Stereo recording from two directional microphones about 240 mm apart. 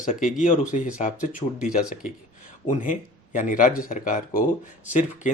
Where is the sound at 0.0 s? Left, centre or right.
Left.